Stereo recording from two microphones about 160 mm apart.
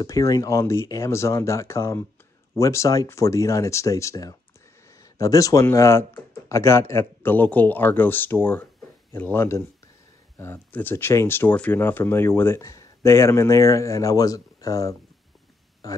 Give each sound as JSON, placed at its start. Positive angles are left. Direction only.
{"t": 0.0, "sound": "speech", "side_deg": 20}